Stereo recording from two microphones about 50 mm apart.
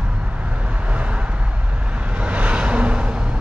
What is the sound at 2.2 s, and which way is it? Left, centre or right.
Vehicle, right.